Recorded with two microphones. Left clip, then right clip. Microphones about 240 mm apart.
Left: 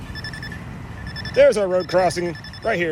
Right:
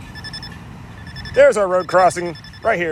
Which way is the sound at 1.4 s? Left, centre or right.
Right.